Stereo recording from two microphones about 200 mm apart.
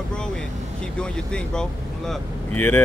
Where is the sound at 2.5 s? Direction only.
10° left (ahead or behind).